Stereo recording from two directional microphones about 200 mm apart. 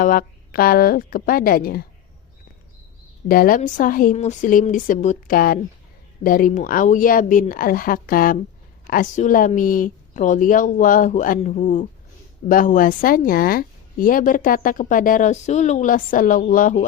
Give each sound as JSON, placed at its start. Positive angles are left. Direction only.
{"t": 0.0, "sound": "a woman's voice", "side_deg": 45}
{"t": 3.2, "sound": "a woman's voice", "side_deg": 45}